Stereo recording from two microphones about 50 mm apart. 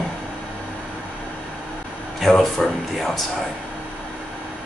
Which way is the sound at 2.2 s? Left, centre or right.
Centre.